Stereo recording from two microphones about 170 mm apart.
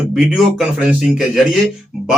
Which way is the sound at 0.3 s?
5° right (ahead or behind).